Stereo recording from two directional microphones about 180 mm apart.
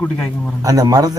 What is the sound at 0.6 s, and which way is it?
Speech, 20° right (ahead or behind).